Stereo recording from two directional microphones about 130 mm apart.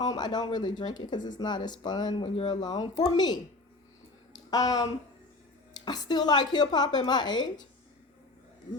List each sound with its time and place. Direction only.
0.0 s speech: 30° left (ahead or behind)
4.3 s a sound: 30° left (ahead or behind)
5.7 s speech: 30° left (ahead or behind)